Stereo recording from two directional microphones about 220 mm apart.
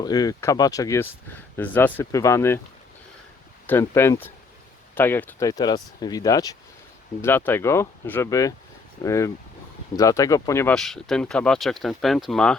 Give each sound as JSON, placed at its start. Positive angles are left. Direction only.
{"t": 0.0, "sound": "speech", "side_deg": 15}
{"t": 3.7, "sound": "speech", "side_deg": 10}